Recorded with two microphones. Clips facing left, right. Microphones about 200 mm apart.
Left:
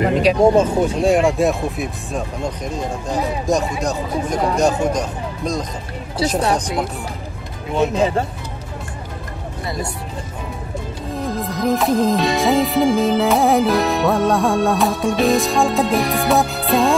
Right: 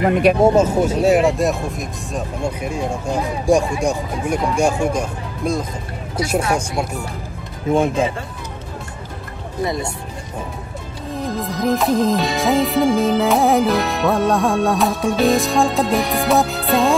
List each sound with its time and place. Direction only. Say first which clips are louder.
0.3 s speech: right 2 dB; 55° right (ahead or behind)
0.6 s speech: even; 5° right (ahead or behind)
6.4 s speech: left 2 dB; 35° left (ahead or behind)
7.7 s speech: right 2 dB; 50° right (ahead or behind)
11.1 s music: even; centre (ahead or behind)